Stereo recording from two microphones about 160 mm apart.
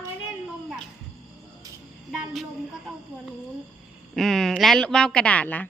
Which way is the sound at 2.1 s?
5° right (ahead or behind).